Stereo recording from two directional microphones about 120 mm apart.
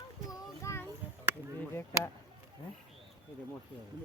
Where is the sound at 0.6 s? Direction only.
25° left (ahead or behind).